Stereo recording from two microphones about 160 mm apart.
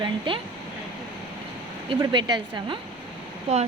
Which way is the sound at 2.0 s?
30° right (ahead or behind).